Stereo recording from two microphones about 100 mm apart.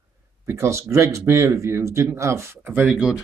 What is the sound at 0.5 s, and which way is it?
Speech, 30° right (ahead or behind).